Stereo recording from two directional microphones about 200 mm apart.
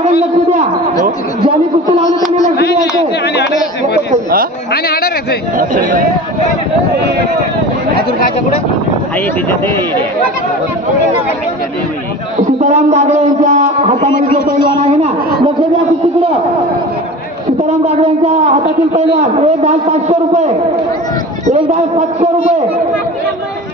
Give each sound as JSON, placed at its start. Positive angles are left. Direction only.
{"t": 3.3, "sound": "speech", "side_deg": 55}
{"t": 4.1, "sound": "speech", "side_deg": -45}
{"t": 4.8, "sound": "a man's voice", "side_deg": 50}
{"t": 5.6, "sound": "a man's voice", "side_deg": -40}
{"t": 12.5, "sound": "a man's voice", "side_deg": -35}
{"t": 13.9, "sound": "a man's voice", "side_deg": 50}
{"t": 14.9, "sound": "a man's voice", "side_deg": -30}
{"t": 17.6, "sound": "a man's voice", "side_deg": -35}